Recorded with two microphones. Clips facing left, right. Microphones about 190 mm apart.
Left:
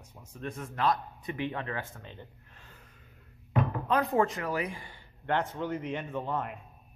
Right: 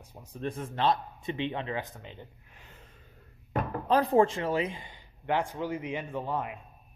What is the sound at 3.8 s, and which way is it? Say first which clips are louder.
Speech: right 5 dB; 30° right (ahead or behind).